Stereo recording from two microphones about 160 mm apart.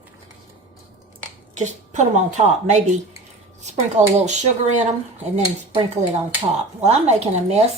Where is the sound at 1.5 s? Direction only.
50° right (ahead or behind).